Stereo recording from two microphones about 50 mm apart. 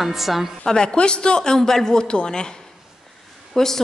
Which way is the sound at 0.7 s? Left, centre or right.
Centre.